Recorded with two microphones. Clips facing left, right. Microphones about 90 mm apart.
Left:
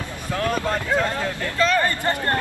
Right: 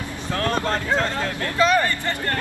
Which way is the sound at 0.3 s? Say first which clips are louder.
Even; 15° left (ahead or behind).